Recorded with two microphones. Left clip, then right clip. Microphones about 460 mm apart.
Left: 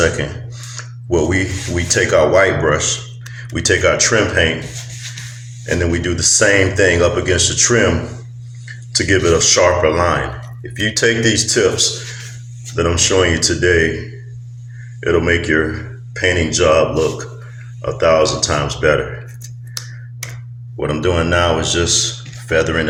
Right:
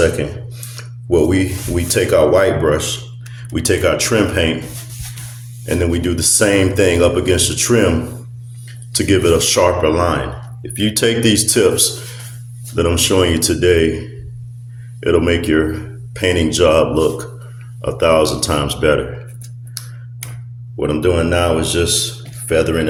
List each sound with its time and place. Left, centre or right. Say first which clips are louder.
0.8 s speech: right 2 dB; right
5.6 s speech: even; right
8.9 s speech: even; right
15.0 s speech: even; right
20.7 s speech: right 1 dB; right